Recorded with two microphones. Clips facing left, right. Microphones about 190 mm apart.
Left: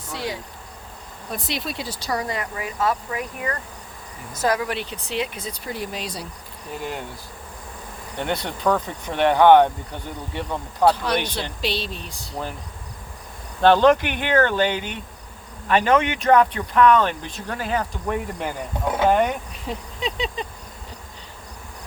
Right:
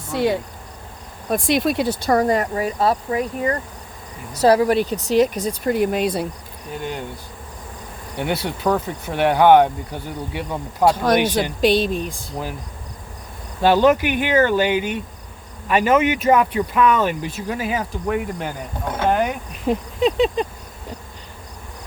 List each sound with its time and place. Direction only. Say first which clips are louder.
0.1 s speech: right 10 dB; 55° right (ahead or behind)
6.7 s speech: right 2 dB; centre (ahead or behind)
8.2 s speech: right 2 dB; 5° right (ahead or behind)
10.9 s speech: right 7 dB; 45° right (ahead or behind)
13.6 s speech: even; 10° right (ahead or behind)
19.6 s speech: right 11 dB; 55° right (ahead or behind)